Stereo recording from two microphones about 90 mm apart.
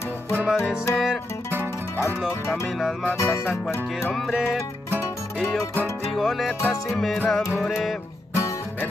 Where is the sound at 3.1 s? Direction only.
30° left (ahead or behind).